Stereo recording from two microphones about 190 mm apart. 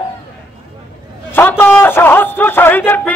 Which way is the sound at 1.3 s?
10° left (ahead or behind).